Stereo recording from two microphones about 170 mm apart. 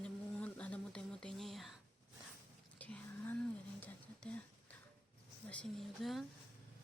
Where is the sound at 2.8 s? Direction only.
10° left (ahead or behind).